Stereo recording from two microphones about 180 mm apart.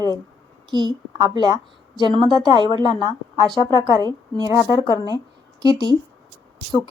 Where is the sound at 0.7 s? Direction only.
25° right (ahead or behind).